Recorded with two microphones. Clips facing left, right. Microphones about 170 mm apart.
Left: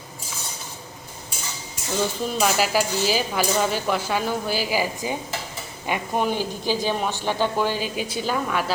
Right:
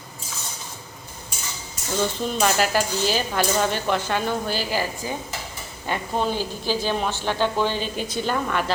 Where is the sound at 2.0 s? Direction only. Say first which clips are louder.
Even; 5° left (ahead or behind).